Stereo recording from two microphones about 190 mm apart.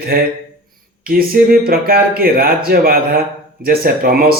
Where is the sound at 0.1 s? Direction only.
50° right (ahead or behind).